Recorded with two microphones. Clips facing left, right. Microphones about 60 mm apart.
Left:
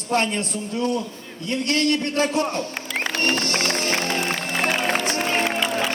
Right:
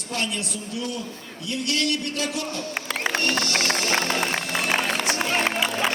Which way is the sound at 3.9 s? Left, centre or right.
Right.